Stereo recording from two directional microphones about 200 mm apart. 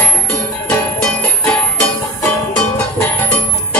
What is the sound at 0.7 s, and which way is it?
Music, 5° left (ahead or behind).